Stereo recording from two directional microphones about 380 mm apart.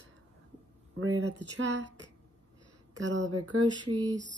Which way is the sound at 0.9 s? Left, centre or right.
Right.